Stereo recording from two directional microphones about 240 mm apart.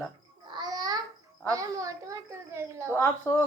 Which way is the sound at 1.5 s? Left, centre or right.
Centre.